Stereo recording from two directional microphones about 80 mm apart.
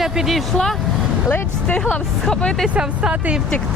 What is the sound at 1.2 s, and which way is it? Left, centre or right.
Speech, centre.